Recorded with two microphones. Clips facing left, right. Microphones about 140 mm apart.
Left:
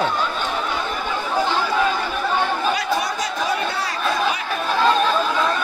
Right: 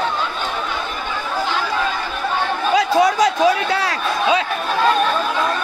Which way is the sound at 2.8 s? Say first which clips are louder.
Right 8 dB; 90° right.